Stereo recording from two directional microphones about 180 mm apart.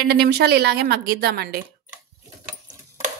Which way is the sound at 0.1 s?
65° right (ahead or behind).